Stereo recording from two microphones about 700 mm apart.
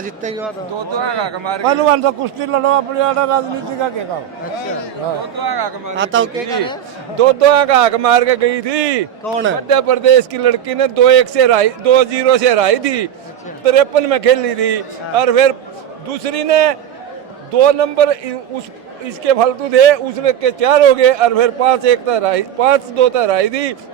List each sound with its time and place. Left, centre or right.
0.0 s speech: centre
0.9 s a man's voice: right
5.4 s speech: right
6.0 s speech: centre
7.2 s a man's voice: right